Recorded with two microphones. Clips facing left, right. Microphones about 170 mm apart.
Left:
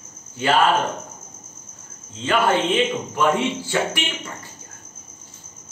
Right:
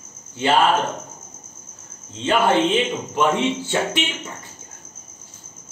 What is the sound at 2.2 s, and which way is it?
Speech, 25° right (ahead or behind).